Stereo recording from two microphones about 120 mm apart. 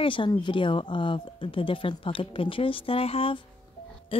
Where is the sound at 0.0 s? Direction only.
45° left (ahead or behind).